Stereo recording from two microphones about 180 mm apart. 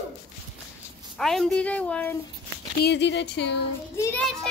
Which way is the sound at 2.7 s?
70° left (ahead or behind).